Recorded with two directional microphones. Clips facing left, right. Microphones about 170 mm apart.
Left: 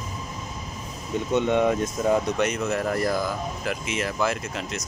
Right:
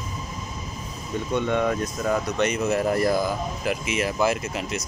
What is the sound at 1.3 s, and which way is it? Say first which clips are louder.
Speech: left 2 dB; 15° left (ahead or behind).